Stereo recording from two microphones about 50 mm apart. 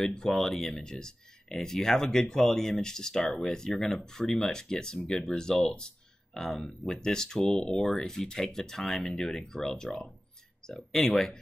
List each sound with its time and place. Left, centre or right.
0.0 s speech: centre
0.3 s speech: centre